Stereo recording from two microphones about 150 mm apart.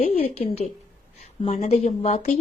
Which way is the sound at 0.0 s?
45° left (ahead or behind).